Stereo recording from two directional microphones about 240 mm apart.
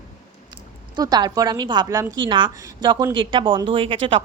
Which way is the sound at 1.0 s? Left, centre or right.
Centre.